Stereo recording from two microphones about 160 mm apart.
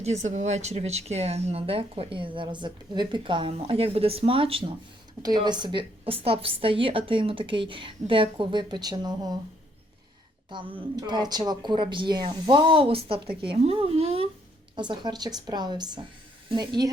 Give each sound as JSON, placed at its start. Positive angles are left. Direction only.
{"t": 0.0, "sound": "speech", "side_deg": -45}
{"t": 10.5, "sound": "speech", "side_deg": -30}
{"t": 14.8, "sound": "a woman's voice", "side_deg": -25}